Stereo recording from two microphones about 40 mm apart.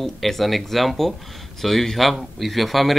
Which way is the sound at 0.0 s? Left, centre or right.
Centre.